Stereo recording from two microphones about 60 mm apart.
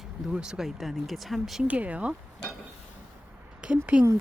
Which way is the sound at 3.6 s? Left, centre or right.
Centre.